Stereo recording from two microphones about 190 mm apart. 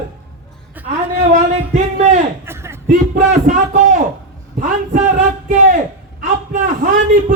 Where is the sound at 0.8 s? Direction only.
10° right (ahead or behind).